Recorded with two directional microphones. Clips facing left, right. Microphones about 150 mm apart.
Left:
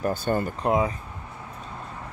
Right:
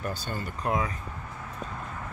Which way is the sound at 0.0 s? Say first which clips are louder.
Left 9 dB; 55° left (ahead or behind).